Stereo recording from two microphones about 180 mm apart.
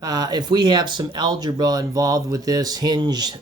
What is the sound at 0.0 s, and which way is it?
Speech, 20° right (ahead or behind).